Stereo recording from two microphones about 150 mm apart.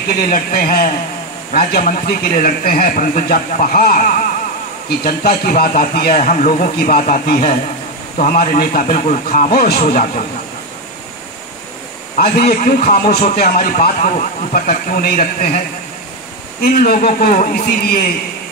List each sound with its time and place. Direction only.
0.3 s a man's voice: 70° left (ahead or behind)
4.8 s a man's voice: 90° left; by 10.2 s 70° left (ahead or behind)
12.2 s a man's voice: 80° left
16.6 s a man's voice: 75° left (ahead or behind)